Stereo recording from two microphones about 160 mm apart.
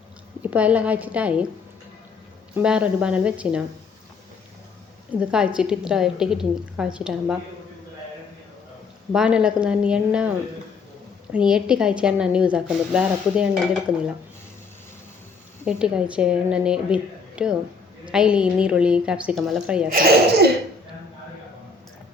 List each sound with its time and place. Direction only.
0.4 s a woman's voice: 10° right (ahead or behind)
2.6 s a woman's voice: 5° right (ahead or behind)
5.2 s a woman's voice: 5° right (ahead or behind)
9.1 s a woman's voice: 5° right (ahead or behind)
11.3 s a woman's voice: 5° right (ahead or behind)
15.6 s a woman's voice: 5° right (ahead or behind)
19.9 s speech: 70° right (ahead or behind)